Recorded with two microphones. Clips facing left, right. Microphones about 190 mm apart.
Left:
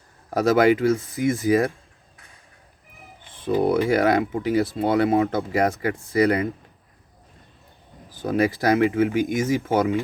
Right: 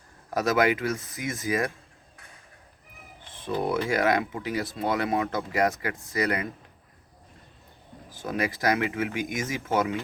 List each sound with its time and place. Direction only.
0.3 s speech: 30° left (ahead or behind)
3.8 s speech: 30° left (ahead or behind)
8.1 s speech: 30° left (ahead or behind)